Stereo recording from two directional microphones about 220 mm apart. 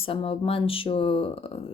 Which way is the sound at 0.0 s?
25° left (ahead or behind).